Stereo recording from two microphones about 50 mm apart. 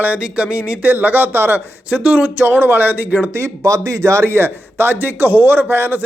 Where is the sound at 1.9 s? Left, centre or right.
Right.